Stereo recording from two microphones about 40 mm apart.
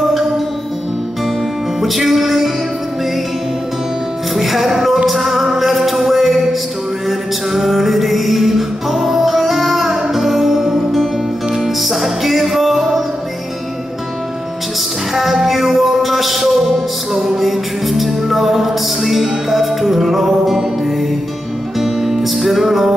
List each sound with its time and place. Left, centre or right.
1.8 s music: centre
4.4 s music: centre
15.1 s music: centre